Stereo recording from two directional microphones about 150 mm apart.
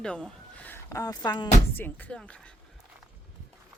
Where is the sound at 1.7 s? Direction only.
10° left (ahead or behind).